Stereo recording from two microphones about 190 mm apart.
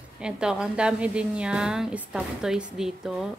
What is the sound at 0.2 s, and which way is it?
A woman's voice, 5° right (ahead or behind).